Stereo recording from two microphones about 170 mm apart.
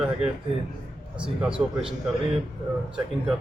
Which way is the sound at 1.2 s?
5° right (ahead or behind).